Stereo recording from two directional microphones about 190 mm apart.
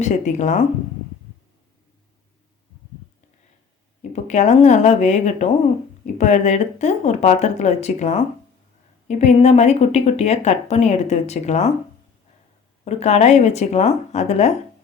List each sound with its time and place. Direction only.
0.0 s speech: 40° left (ahead or behind)
4.1 s speech: 40° left (ahead or behind)
12.8 s speech: 35° left (ahead or behind)